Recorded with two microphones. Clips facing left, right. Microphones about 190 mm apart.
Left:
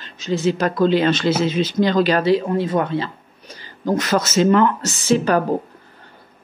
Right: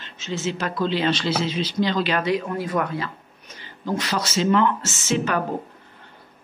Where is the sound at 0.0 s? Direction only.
35° left (ahead or behind).